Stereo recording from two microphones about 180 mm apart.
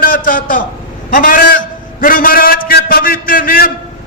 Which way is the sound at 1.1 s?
50° left (ahead or behind).